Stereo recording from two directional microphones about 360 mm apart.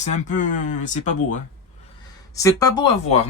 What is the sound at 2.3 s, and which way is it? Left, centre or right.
Speech, centre.